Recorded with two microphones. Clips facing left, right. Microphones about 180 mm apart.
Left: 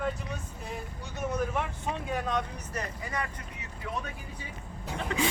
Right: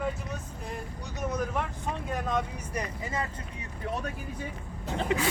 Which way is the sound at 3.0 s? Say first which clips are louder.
Right 1 dB; 25° right (ahead or behind).